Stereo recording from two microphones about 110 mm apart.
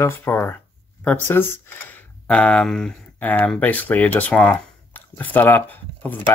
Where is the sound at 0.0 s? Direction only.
20° left (ahead or behind).